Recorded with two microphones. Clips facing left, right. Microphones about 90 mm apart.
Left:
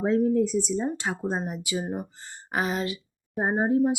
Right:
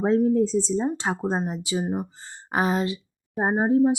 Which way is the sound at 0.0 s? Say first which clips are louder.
Right 2 dB; 35° right (ahead or behind).